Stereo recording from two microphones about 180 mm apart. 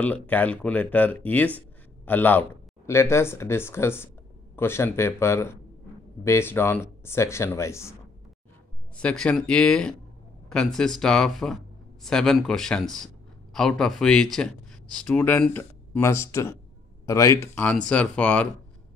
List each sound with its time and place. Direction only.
0.0 s speech: 10° left (ahead or behind)
8.9 s speech: 5° left (ahead or behind)